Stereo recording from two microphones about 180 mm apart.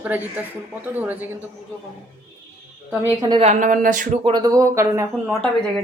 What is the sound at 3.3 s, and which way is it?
Speech, 35° right (ahead or behind).